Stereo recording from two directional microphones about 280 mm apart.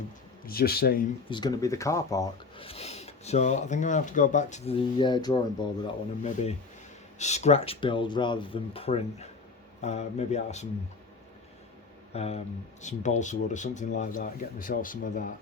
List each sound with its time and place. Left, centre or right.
0.4 s speech: left
1.3 s speech: centre
12.1 s speech: left